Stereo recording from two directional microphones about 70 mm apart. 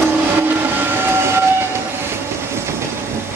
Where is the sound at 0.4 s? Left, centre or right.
Right.